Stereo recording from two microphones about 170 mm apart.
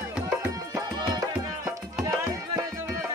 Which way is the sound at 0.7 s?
20° right (ahead or behind).